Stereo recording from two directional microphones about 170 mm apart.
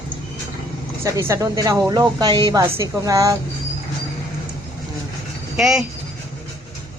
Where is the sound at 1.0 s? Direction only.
15° right (ahead or behind).